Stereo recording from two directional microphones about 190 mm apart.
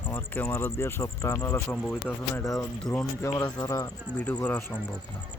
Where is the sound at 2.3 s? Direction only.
15° left (ahead or behind).